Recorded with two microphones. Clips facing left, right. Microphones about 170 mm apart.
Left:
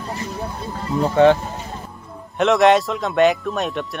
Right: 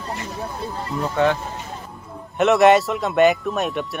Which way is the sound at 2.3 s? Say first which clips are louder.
Even; 5° right (ahead or behind).